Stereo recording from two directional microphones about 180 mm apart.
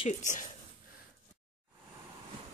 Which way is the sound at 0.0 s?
40° left (ahead or behind).